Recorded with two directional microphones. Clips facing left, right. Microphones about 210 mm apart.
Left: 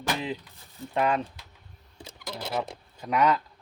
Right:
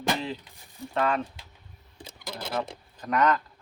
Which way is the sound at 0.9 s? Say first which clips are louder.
Left 1 dB; 20° left (ahead or behind).